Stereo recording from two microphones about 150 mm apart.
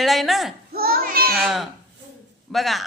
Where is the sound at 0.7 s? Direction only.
90° right.